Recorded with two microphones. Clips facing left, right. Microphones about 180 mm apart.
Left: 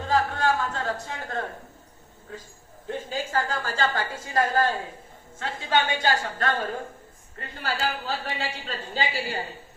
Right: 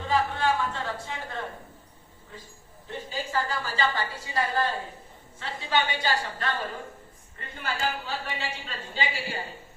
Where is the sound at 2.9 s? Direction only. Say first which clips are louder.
Left 4 dB; 50° left (ahead or behind).